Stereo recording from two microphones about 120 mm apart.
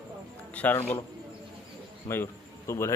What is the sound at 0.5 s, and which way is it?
Speech, 15° left (ahead or behind).